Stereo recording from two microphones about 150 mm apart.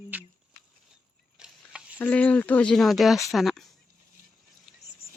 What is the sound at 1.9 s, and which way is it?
Speech, 10° left (ahead or behind).